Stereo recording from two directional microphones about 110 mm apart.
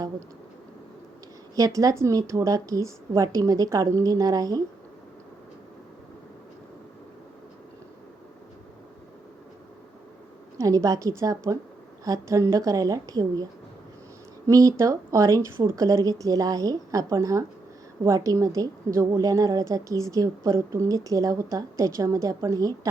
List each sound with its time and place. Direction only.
1.5 s a woman's voice: 30° right (ahead or behind)
10.6 s a woman's voice: 30° right (ahead or behind)